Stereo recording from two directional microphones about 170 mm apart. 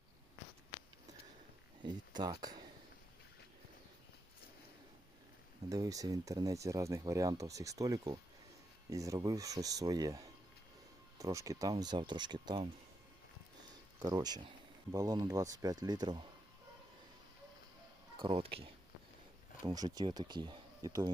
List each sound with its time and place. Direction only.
1.8 s speech: 25° right (ahead or behind)
5.6 s speech: 20° right (ahead or behind)
14.0 s speech: 25° right (ahead or behind)
18.2 s speech: 35° right (ahead or behind)
19.6 s speech: 20° right (ahead or behind)